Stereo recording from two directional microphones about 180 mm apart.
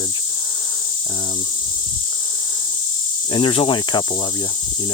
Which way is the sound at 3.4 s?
25° left (ahead or behind).